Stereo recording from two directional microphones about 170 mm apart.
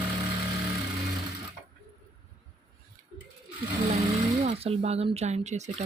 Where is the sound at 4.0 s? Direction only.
40° right (ahead or behind).